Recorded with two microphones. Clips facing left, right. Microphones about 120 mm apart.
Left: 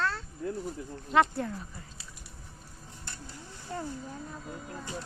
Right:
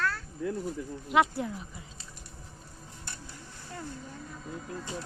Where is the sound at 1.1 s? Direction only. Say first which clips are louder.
Even; 10° right (ahead or behind).